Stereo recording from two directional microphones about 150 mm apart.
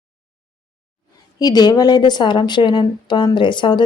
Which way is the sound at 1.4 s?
25° left (ahead or behind).